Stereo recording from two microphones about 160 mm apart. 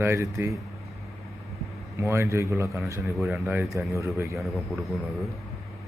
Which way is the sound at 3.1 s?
Centre (ahead or behind).